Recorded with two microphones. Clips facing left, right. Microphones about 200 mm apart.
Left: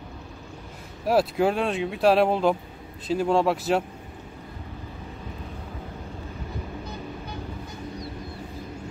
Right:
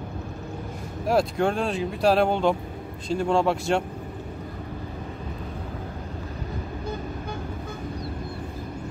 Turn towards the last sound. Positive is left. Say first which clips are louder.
# right 3 dB
turn(degrees=-50)  # may be behind; listen again after turning